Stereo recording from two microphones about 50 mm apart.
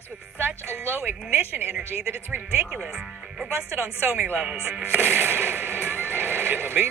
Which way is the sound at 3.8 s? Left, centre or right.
Right.